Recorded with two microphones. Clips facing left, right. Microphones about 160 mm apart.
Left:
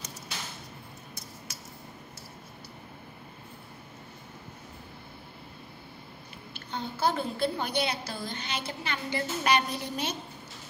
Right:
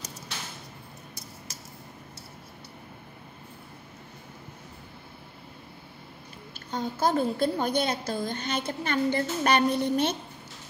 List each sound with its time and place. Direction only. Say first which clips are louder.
6.7 s a woman's voice: right 3 dB; 45° right (ahead or behind)